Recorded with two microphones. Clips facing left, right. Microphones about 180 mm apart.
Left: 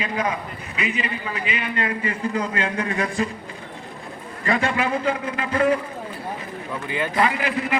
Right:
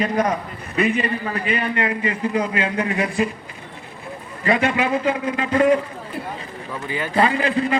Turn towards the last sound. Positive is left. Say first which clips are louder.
# right 3 dB
turn(degrees=-30)  # may be behind; listen again after turning